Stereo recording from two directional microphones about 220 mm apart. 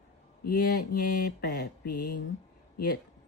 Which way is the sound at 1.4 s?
50° left (ahead or behind).